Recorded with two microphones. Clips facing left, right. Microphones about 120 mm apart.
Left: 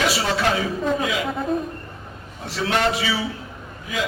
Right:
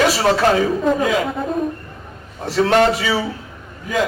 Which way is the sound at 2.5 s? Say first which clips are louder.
Right 7 dB; 45° right (ahead or behind).